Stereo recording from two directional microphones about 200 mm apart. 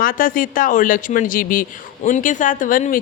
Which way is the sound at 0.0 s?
45° left (ahead or behind).